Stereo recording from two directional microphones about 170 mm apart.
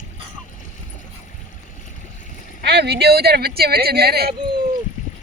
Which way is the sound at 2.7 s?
75° right (ahead or behind).